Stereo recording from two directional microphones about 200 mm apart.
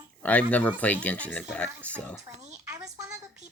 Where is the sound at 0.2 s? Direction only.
5° left (ahead or behind).